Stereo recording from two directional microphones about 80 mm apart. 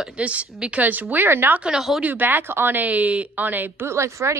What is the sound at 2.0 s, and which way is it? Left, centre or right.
Speech, right.